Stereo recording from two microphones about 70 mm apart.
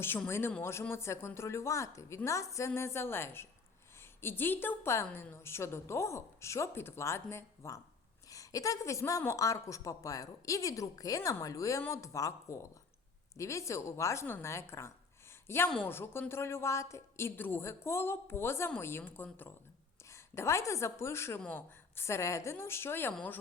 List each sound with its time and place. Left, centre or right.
0.3 s a woman's voice: left
8.3 s a woman's voice: left
20.1 s a woman's voice: left